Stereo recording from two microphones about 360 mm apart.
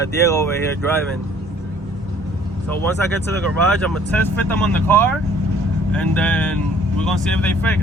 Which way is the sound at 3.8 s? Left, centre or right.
Centre.